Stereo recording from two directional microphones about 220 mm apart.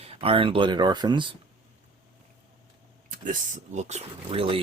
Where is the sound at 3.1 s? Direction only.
35° right (ahead or behind).